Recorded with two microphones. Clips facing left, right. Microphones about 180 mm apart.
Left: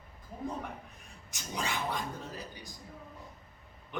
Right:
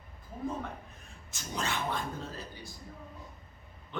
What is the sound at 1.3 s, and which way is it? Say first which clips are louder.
Speech: right 1 dB; 15° left (ahead or behind).